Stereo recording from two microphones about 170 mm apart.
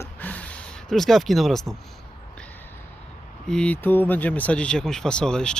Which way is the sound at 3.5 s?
5° left (ahead or behind).